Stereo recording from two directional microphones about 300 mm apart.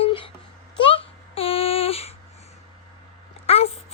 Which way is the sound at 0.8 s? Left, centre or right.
Centre.